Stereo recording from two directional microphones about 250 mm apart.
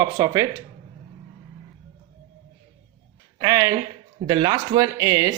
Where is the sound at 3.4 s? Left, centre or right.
Centre.